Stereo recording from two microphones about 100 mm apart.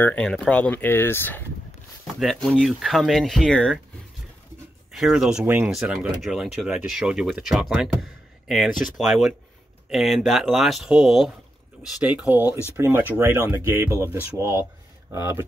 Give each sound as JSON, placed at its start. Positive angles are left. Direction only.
{"t": 0.0, "sound": "speech", "side_deg": 15}
{"t": 2.1, "sound": "speech", "side_deg": 0}
{"t": 4.9, "sound": "speech", "side_deg": -5}
{"t": 5.4, "sound": "speech", "side_deg": -20}
{"t": 5.7, "sound": "speech", "side_deg": -5}